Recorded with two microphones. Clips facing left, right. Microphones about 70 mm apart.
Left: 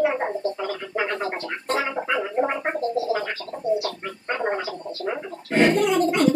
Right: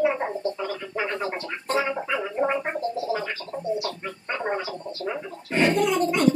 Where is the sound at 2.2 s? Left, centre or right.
Left.